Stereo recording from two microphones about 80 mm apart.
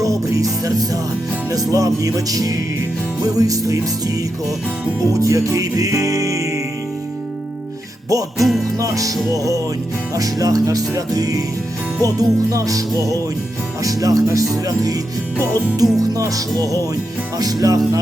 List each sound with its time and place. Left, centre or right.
0.0 s music: right
8.1 s music: right